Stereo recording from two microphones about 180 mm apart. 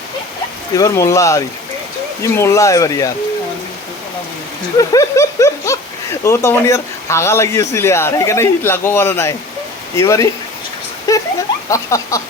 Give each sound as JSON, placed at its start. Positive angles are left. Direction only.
{"t": 0.8, "sound": "speech", "side_deg": 15}
{"t": 4.8, "sound": "speech", "side_deg": 20}
{"t": 11.1, "sound": "a sound", "side_deg": 20}
{"t": 11.7, "sound": "speech", "side_deg": 15}